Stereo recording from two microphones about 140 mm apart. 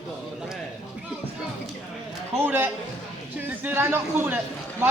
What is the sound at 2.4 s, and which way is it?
A man's voice, 15° right (ahead or behind).